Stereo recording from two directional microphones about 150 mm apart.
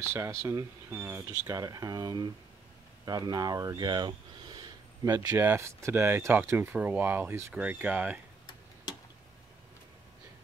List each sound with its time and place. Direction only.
0.1 s speech: 20° right (ahead or behind)
5.4 s speech: 15° right (ahead or behind)